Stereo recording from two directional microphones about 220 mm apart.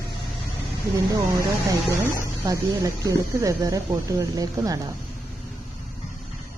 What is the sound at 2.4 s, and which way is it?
Speech, 15° right (ahead or behind).